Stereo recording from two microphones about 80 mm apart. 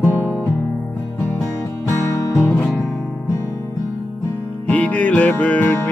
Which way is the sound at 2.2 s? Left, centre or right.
Left.